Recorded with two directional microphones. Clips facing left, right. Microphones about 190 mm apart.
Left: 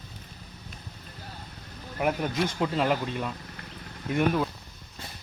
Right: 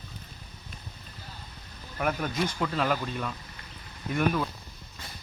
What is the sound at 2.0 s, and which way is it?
Speech, 15° left (ahead or behind).